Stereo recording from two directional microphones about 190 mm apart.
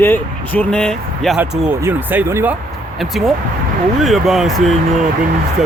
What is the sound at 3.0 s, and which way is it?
Speech, centre (ahead or behind).